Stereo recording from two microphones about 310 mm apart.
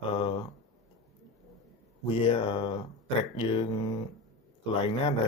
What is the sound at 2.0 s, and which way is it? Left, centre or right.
Speech, centre.